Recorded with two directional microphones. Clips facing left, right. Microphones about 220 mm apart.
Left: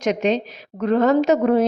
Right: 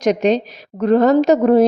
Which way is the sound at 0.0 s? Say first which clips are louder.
Right 4 dB; 40° right (ahead or behind).